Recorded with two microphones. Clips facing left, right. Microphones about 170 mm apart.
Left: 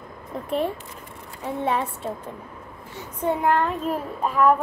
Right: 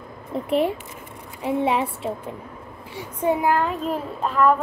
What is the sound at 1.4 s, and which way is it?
A child's voice, 10° right (ahead or behind).